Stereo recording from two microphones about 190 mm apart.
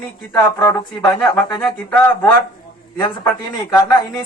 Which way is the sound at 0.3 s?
15° left (ahead or behind).